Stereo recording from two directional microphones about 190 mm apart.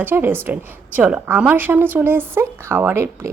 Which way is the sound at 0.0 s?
10° right (ahead or behind).